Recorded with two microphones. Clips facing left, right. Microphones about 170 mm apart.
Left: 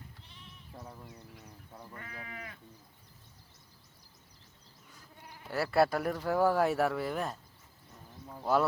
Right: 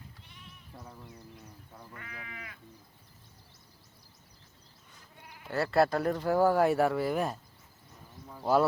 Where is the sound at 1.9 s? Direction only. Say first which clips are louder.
Left 1 dB; 35° left (ahead or behind).